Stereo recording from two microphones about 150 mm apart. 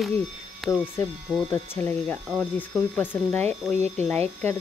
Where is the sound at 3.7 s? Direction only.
50° right (ahead or behind).